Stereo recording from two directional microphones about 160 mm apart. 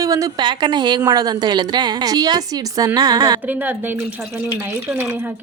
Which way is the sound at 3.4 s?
10° right (ahead or behind).